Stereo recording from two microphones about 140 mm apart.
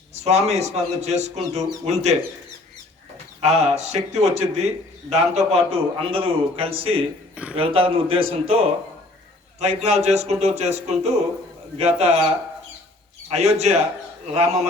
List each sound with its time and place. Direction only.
0.1 s a man's voice: 50° right (ahead or behind)
3.4 s a man's voice: 50° right (ahead or behind)
13.2 s a man's voice: 50° right (ahead or behind)